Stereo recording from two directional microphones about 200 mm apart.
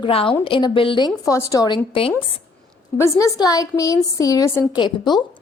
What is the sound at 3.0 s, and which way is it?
A woman's voice, 15° left (ahead or behind).